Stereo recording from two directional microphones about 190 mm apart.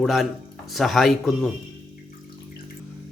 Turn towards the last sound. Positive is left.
turn(degrees=0)  # may be behind; listen again after turning